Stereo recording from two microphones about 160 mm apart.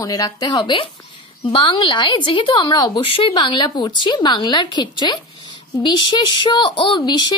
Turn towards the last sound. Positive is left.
turn(degrees=30)  # may be behind; listen again after turning